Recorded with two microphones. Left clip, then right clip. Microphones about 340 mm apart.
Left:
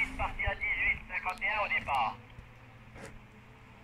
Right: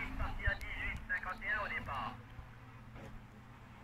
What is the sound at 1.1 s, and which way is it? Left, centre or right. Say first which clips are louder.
Radio: left 5 dB; left.